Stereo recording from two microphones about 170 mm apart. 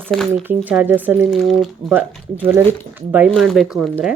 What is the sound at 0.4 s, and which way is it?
Speech, 10° right (ahead or behind).